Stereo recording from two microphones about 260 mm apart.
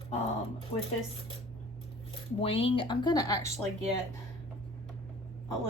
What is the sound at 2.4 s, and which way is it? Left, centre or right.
Speech, left.